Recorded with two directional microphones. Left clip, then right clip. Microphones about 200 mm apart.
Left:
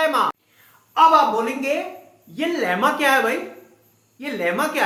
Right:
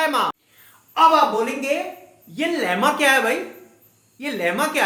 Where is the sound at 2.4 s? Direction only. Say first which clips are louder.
Even; 20° right (ahead or behind).